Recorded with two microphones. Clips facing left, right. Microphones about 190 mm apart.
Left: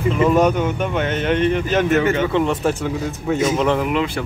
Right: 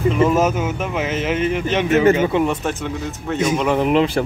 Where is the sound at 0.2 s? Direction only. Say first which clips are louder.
Left 4 dB; 5° right (ahead or behind).